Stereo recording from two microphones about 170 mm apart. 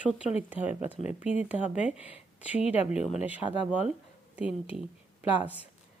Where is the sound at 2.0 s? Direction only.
10° right (ahead or behind).